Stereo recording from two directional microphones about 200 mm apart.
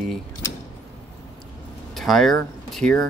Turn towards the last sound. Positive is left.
turn(degrees=0)  # may be behind; listen again after turning